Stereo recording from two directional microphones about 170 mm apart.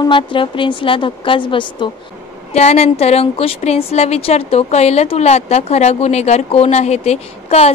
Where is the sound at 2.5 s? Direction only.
40° left (ahead or behind).